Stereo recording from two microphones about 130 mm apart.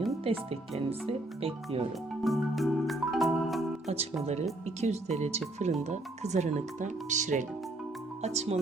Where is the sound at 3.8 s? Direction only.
55° right (ahead or behind).